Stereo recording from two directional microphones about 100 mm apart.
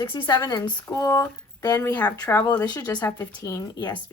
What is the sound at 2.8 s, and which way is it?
Speech, 40° left (ahead or behind).